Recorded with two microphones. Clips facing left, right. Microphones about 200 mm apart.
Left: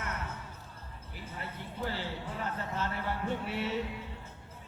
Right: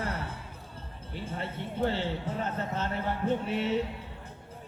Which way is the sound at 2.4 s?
20° right (ahead or behind).